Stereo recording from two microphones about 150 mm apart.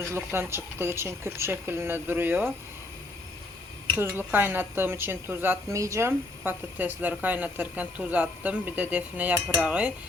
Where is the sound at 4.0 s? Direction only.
15° right (ahead or behind).